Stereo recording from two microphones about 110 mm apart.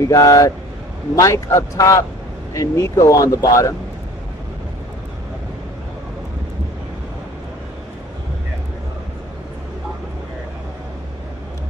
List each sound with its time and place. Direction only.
0.0 s speech: 30° left (ahead or behind)